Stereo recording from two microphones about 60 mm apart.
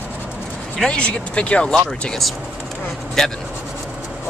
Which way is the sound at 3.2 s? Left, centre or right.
Centre.